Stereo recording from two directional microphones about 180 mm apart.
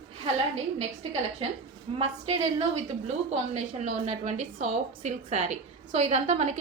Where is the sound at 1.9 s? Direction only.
35° right (ahead or behind).